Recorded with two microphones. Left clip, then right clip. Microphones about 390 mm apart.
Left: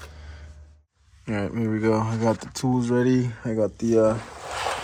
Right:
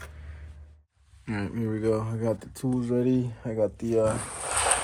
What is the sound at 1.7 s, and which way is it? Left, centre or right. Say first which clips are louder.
Speech: left 4 dB; left.